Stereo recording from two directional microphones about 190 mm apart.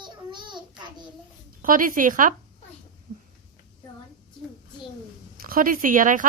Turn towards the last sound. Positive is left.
turn(degrees=-45)  # may be behind; listen again after turning